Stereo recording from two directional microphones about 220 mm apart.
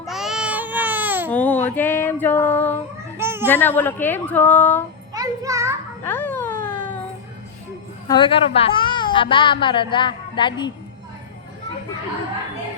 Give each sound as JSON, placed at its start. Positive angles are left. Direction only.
{"t": 0.0, "sound": "baby cry", "side_deg": 0}
{"t": 1.3, "sound": "female singing", "side_deg": 5}
{"t": 3.2, "sound": "a sound", "side_deg": -10}
{"t": 3.5, "sound": "a woman's voice", "side_deg": 10}
{"t": 5.1, "sound": "music", "side_deg": -15}
{"t": 6.1, "sound": "a sound", "side_deg": 10}
{"t": 8.0, "sound": "a child's voice", "side_deg": 20}